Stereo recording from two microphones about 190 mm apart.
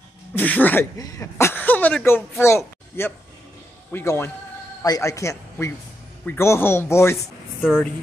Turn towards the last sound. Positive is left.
turn(degrees=10)  # may be behind; listen again after turning